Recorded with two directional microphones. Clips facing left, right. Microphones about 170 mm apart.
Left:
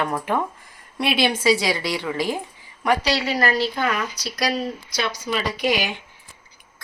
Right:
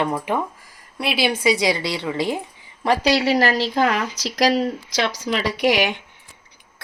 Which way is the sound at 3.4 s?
90° right.